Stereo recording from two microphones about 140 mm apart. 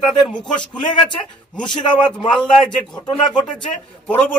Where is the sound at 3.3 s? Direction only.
10° left (ahead or behind).